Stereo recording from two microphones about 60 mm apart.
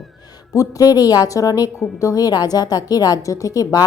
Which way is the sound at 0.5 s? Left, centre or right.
Left.